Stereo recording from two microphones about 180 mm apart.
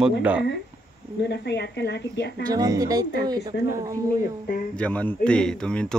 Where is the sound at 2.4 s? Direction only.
20° right (ahead or behind).